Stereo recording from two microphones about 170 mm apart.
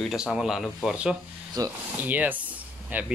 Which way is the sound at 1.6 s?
20° right (ahead or behind).